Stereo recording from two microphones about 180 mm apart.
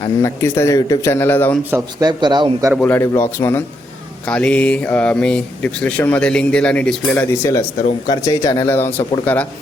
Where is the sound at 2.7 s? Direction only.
10° left (ahead or behind).